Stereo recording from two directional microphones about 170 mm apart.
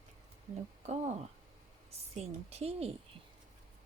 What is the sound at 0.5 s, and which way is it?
A woman's voice, 40° right (ahead or behind).